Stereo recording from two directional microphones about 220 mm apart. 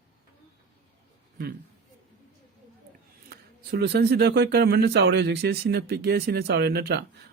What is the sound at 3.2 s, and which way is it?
Speech, 45° right (ahead or behind).